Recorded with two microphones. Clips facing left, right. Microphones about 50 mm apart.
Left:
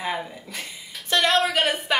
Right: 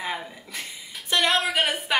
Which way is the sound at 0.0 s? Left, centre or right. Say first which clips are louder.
Left 3 dB; centre.